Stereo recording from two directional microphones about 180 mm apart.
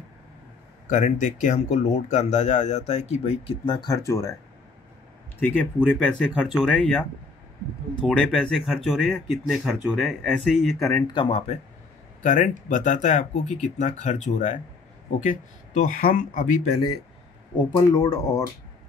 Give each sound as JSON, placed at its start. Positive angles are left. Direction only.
{"t": 0.8, "sound": "speech", "side_deg": 45}
{"t": 5.4, "sound": "speech", "side_deg": 10}
{"t": 10.8, "sound": "speech", "side_deg": 15}
{"t": 11.1, "sound": "speech", "side_deg": 30}
{"t": 12.2, "sound": "speech", "side_deg": 45}
{"t": 15.8, "sound": "speech", "side_deg": 50}
{"t": 17.6, "sound": "speech", "side_deg": 20}